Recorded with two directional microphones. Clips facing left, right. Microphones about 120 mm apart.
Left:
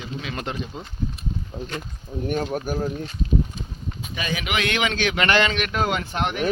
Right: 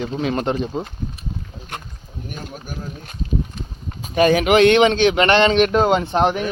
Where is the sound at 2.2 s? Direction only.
60° left (ahead or behind).